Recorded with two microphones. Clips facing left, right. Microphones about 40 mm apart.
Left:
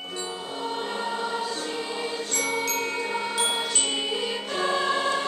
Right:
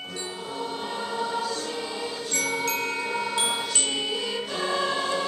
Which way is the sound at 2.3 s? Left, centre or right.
Centre.